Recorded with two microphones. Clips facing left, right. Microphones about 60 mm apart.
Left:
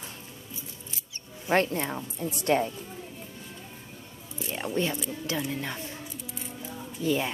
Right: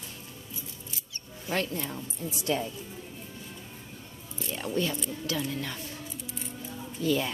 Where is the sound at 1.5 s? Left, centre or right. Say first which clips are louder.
Left 6 dB; left.